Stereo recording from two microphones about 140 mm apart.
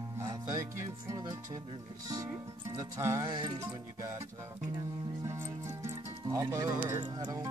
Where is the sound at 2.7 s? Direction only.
25° right (ahead or behind).